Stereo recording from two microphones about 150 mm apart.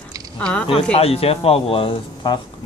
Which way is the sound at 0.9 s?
40° left (ahead or behind).